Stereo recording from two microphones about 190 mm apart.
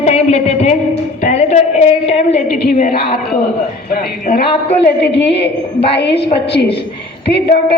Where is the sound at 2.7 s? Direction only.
40° left (ahead or behind).